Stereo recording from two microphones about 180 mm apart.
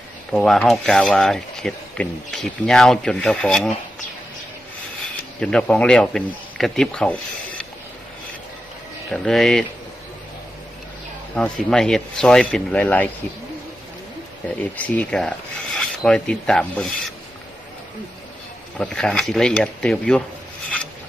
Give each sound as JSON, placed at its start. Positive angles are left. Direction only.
{"t": 0.3, "sound": "speech", "side_deg": 0}
{"t": 5.4, "sound": "speech", "side_deg": 5}
{"t": 9.0, "sound": "speech", "side_deg": 0}
{"t": 11.3, "sound": "speech", "side_deg": 5}
{"t": 14.8, "sound": "speech", "side_deg": 10}
{"t": 18.8, "sound": "speech", "side_deg": 5}